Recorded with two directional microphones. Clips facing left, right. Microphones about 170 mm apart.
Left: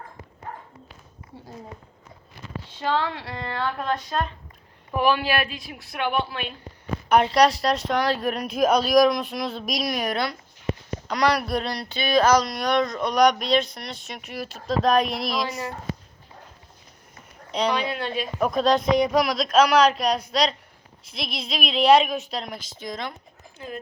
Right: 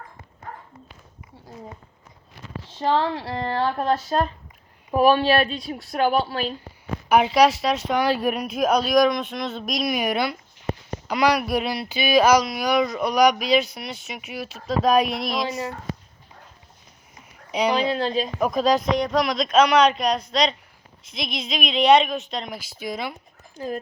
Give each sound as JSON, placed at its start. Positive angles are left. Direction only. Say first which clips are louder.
{"t": 2.8, "sound": "speech", "louder": "right 4 dB", "side_deg": -35}
{"t": 7.1, "sound": "speech", "louder": "right 1 dB", "side_deg": -5}
{"t": 15.4, "sound": "speech", "louder": "right 3 dB", "side_deg": -25}
{"t": 17.7, "sound": "speech", "louder": "right 5 dB", "side_deg": -30}
{"t": 18.3, "sound": "speech", "louder": "left 1 dB", "side_deg": 0}
{"t": 23.6, "sound": "speech", "louder": "right 6 dB", "side_deg": -40}